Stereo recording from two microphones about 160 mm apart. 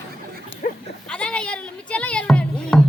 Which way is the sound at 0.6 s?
65° left (ahead or behind).